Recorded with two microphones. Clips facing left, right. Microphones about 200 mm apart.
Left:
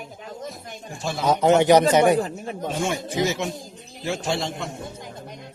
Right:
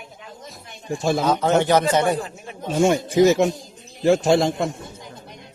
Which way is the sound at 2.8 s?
45° right (ahead or behind).